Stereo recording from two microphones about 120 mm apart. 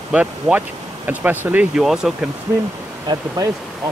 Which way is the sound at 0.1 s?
10° right (ahead or behind).